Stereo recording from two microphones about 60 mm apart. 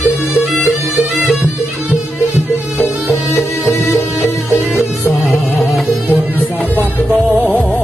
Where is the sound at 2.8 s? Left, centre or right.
Left.